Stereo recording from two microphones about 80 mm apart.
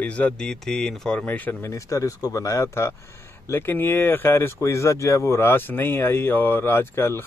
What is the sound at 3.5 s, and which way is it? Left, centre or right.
Speech, left.